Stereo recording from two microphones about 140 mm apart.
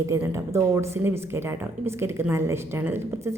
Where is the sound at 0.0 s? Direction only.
20° right (ahead or behind).